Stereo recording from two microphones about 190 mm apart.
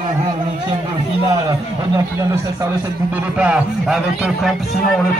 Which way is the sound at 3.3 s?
5° right (ahead or behind).